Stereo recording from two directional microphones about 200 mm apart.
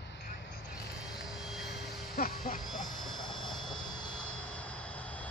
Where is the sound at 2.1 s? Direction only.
45° left (ahead or behind).